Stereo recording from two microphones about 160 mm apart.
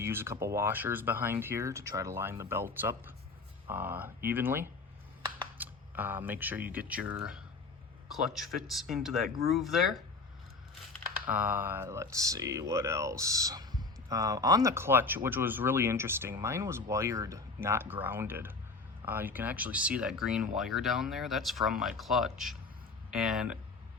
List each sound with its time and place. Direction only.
0.0 s speech: 15° right (ahead or behind)
11.3 s speech: 10° right (ahead or behind)